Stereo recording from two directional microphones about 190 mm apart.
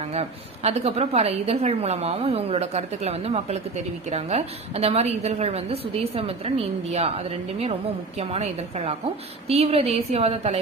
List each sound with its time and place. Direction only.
0.0 s a woman's voice: 35° right (ahead or behind)